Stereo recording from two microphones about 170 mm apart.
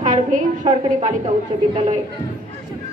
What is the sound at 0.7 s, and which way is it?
A woman's voice, 35° right (ahead or behind).